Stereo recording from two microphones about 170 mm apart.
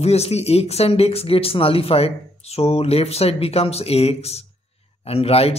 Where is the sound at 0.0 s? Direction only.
40° left (ahead or behind).